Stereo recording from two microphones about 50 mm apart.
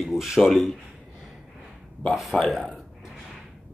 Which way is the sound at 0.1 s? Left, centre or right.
Centre.